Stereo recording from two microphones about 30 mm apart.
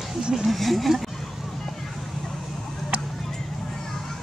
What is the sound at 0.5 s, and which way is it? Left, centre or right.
Speech, centre.